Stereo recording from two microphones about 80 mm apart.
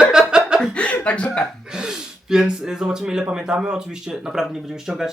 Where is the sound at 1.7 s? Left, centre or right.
Centre.